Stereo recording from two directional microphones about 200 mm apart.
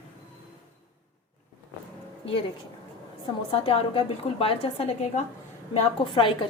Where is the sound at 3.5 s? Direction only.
30° left (ahead or behind).